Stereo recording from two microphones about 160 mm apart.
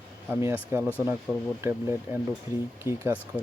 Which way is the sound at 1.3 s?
5° right (ahead or behind).